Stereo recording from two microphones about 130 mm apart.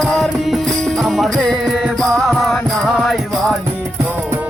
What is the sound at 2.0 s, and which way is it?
Music, centre (ahead or behind).